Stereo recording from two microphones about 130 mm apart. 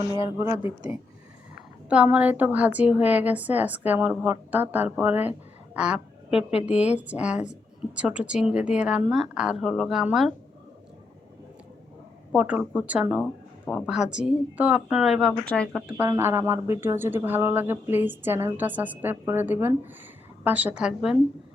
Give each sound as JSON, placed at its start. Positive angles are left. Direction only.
{"t": 0.2, "sound": "a woman's voice", "side_deg": -20}
{"t": 1.9, "sound": "a woman's voice", "side_deg": -10}
{"t": 12.3, "sound": "a woman's voice", "side_deg": -10}
{"t": 15.4, "sound": "speech", "side_deg": 10}
{"t": 16.0, "sound": "speech", "side_deg": -20}